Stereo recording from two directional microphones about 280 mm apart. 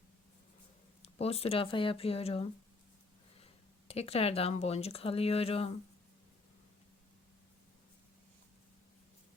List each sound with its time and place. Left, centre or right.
1.0 s speech: left